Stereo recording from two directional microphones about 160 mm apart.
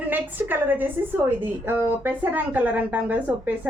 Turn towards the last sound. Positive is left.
turn(degrees=-10)  # may be behind; listen again after turning